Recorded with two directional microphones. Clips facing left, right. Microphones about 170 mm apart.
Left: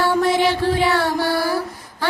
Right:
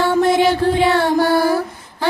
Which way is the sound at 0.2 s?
50° right (ahead or behind).